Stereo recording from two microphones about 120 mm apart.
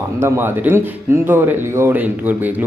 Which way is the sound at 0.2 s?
20° right (ahead or behind).